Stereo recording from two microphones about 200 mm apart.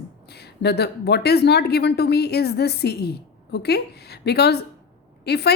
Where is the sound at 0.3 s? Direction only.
55° left (ahead or behind).